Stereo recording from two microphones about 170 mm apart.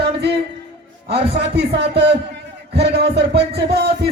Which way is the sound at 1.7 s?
80° right.